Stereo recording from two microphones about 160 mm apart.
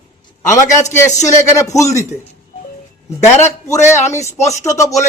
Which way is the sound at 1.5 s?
20° left (ahead or behind).